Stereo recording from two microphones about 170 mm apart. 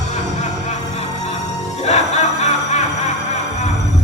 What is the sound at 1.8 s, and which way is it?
Music, 40° left (ahead or behind).